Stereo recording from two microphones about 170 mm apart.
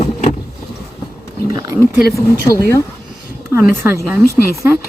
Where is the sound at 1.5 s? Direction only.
20° right (ahead or behind).